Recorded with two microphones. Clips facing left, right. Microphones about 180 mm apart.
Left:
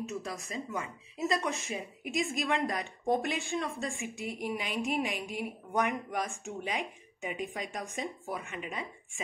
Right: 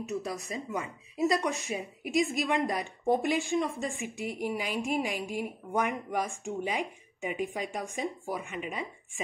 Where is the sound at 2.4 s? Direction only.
Centre (ahead or behind).